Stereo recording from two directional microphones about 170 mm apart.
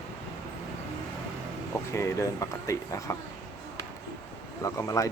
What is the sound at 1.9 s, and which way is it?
Speech, 15° left (ahead or behind).